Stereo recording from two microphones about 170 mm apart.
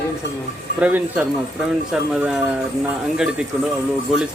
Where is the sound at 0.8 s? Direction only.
10° right (ahead or behind).